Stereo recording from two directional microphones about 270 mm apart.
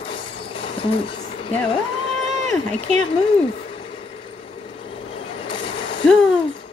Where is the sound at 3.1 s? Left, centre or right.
Centre.